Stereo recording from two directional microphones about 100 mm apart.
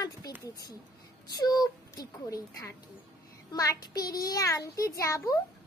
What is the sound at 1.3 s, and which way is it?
A child's voice, 40° left (ahead or behind).